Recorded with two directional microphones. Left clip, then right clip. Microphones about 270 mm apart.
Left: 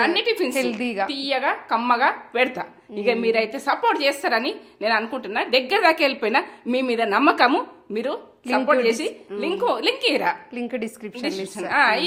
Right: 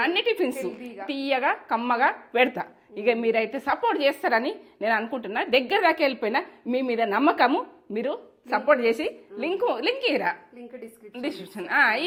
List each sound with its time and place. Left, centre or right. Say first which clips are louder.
0.0 s a woman's voice: left 3 dB; right
0.5 s a woman's voice: left 10 dB; left
1.0 s a woman's voice: even; right
8.4 s a woman's voice: left 2 dB; right
10.5 s a woman's voice: left 13 dB; left
11.1 s a woman's voice: left 2 dB; right